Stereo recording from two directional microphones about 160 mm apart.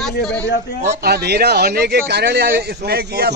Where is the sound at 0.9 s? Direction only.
85° right.